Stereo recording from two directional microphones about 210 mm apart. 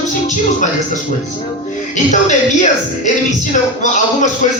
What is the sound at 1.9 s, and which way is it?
Speech, 35° left (ahead or behind).